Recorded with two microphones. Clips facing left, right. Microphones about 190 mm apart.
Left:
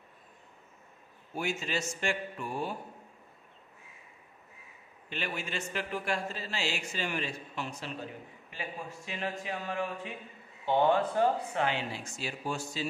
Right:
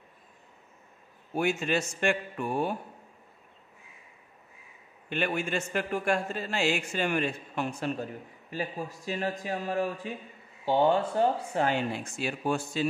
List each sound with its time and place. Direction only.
1.3 s a man's voice: 55° right (ahead or behind)
5.1 s a man's voice: 55° right (ahead or behind); by 11.6 s 30° right (ahead or behind)
11.6 s a man's voice: 50° right (ahead or behind)